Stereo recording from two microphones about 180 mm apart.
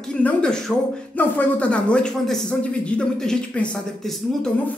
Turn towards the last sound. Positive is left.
turn(degrees=0)  # may be behind; listen again after turning